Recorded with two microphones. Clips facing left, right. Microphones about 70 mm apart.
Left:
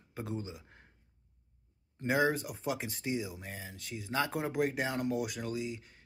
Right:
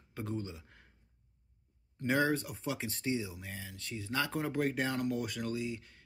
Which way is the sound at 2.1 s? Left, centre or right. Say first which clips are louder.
Left 1 dB; centre.